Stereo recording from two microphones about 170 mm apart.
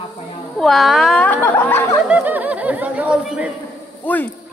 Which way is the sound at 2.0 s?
10° right (ahead or behind).